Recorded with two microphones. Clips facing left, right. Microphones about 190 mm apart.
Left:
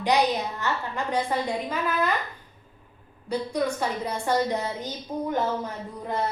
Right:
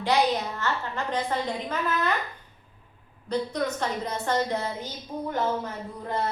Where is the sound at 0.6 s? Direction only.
15° left (ahead or behind).